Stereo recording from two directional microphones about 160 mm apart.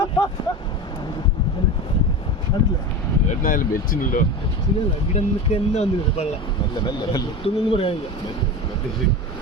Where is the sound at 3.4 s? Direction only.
60° left (ahead or behind).